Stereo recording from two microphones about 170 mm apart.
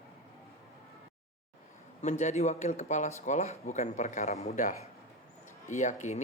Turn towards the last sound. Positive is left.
turn(degrees=45)  # may be behind; listen again after turning